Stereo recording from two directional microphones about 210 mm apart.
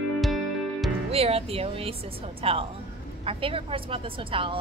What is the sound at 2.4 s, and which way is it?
A woman's voice, 25° right (ahead or behind).